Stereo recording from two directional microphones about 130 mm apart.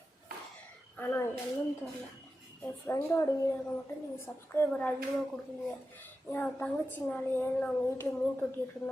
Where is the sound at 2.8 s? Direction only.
20° left (ahead or behind).